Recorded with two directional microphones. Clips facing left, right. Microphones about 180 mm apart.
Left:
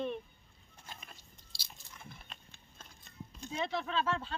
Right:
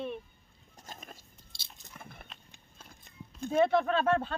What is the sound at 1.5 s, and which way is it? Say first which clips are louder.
Chewing: even; 20° right (ahead or behind).